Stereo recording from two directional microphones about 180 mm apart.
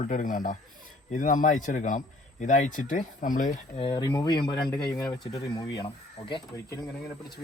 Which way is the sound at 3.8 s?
25° left (ahead or behind).